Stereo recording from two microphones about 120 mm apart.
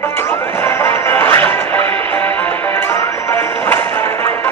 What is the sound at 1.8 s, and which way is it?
Music, 55° right (ahead or behind).